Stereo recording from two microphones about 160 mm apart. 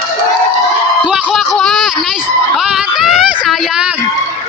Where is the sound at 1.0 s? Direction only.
5° right (ahead or behind).